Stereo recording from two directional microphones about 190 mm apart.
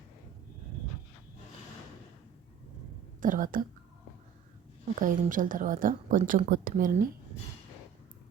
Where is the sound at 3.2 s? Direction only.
45° right (ahead or behind).